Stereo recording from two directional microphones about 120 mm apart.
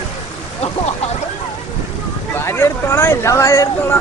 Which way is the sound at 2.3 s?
20° left (ahead or behind).